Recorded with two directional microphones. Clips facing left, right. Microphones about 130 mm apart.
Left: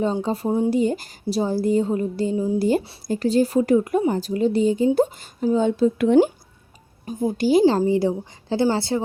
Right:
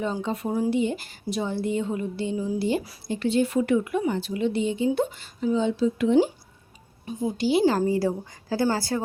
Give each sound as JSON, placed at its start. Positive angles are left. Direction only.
{"t": 0.0, "sound": "a woman's voice", "side_deg": 35}
{"t": 0.7, "sound": "a woman's voice", "side_deg": 40}
{"t": 2.6, "sound": "a woman's voice", "side_deg": 45}
{"t": 5.5, "sound": "speech", "side_deg": 50}
{"t": 7.0, "sound": "speech", "side_deg": 45}
{"t": 7.6, "sound": "a woman's voice", "side_deg": 20}